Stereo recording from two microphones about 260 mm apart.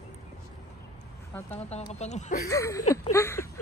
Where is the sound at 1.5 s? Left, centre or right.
Left.